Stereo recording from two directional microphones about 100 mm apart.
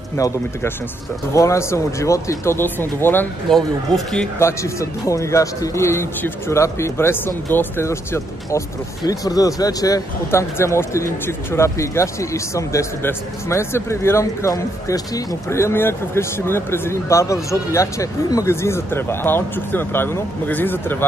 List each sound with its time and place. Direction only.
0.2 s speech: 30° left (ahead or behind)
3.4 s speech: 5° left (ahead or behind)
4.4 s speech: 30° left (ahead or behind)